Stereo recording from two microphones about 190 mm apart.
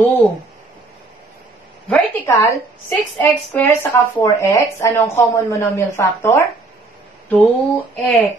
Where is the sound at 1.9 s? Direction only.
10° left (ahead or behind).